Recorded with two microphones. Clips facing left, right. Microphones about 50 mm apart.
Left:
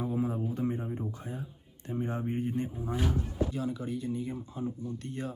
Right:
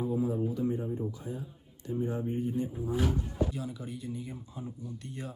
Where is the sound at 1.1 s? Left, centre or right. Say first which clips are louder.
Right 1 dB; left.